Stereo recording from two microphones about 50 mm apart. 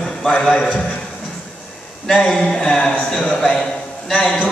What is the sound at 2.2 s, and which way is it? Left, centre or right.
Speech, centre.